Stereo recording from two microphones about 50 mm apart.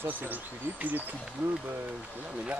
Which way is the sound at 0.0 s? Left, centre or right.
Right.